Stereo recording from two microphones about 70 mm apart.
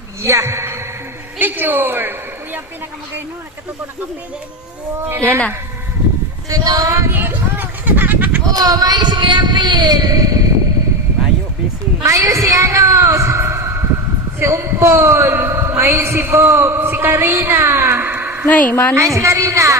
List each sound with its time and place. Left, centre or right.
0.2 s a woman's voice: right
1.4 s a woman's voice: right
6.5 s speech: right
7.1 s a sound: right
8.5 s speech: right
12.0 s a sound: right
14.3 s a man's voice: right
18.4 s a woman's voice: left
18.9 s a woman's voice: right